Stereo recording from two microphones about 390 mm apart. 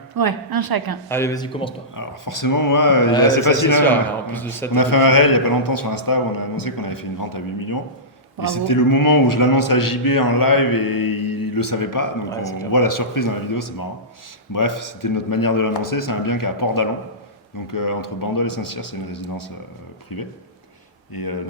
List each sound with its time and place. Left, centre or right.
0.2 s a woman's voice: right
1.0 s speech: centre
2.0 s a man's voice: left
3.8 s speech: centre
4.7 s a man's voice: left
12.3 s speech: centre
12.7 s a man's voice: left